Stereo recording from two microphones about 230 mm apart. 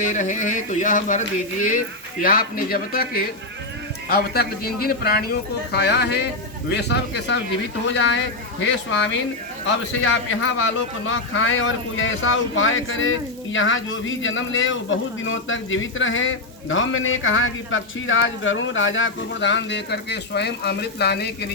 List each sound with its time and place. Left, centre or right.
0.0 s speech: left
2.2 s speech: left
9.6 s speech: left